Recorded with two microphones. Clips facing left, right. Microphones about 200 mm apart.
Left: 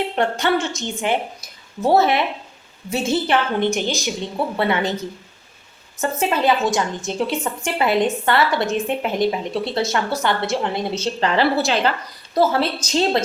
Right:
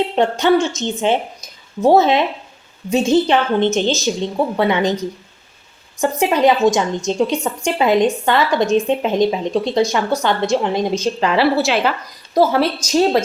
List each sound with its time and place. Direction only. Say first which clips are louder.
0.2 s a woman's voice: right 6 dB; 20° right (ahead or behind)
6.0 s a woman's voice: right 5 dB; 15° right (ahead or behind)